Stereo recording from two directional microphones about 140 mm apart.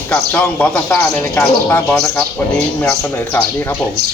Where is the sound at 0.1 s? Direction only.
10° left (ahead or behind).